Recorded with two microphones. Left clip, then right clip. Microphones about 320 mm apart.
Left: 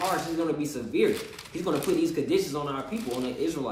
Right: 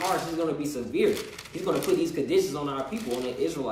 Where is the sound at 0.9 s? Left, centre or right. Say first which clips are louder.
Even; centre.